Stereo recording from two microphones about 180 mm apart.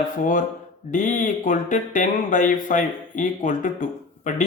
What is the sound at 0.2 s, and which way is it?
Speech, 45° left (ahead or behind).